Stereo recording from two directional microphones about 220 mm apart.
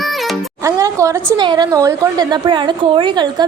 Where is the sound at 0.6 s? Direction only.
15° right (ahead or behind).